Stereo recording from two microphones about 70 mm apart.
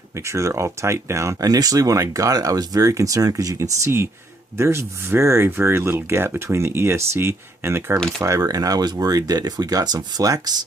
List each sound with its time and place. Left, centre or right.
0.3 s speech: right
1.5 s speech: right
3.8 s speech: right
8.2 s speech: right